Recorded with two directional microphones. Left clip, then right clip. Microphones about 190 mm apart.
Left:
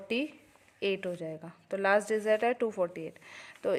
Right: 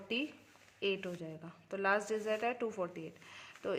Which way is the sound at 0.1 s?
30° left (ahead or behind).